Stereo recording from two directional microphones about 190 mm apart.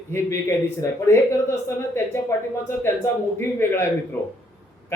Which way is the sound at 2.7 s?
15° left (ahead or behind).